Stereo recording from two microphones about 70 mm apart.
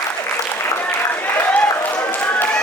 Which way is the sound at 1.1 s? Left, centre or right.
Left.